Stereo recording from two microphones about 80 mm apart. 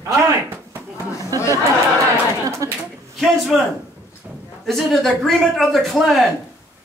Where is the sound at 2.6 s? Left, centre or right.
Right.